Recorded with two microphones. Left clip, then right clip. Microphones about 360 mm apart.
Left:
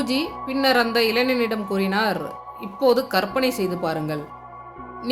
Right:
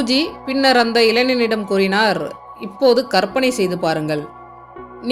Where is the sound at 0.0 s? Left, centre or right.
Left.